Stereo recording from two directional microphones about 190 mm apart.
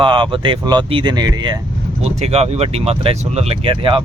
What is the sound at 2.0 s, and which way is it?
Speech, 35° right (ahead or behind).